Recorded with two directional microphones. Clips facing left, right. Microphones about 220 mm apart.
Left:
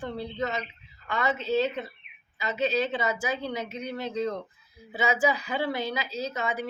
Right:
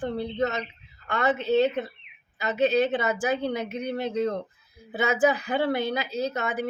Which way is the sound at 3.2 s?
55° right (ahead or behind).